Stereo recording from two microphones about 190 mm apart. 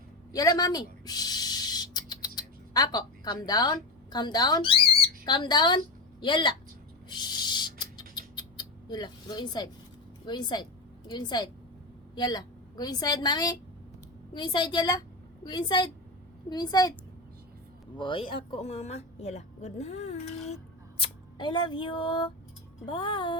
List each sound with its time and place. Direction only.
0.3 s a sound: 20° left (ahead or behind)
7.1 s rodents: 25° left (ahead or behind)
10.2 s a woman's voice: 25° left (ahead or behind)
17.9 s a woman's voice: 25° left (ahead or behind)
21.0 s a woman's voice: 25° left (ahead or behind)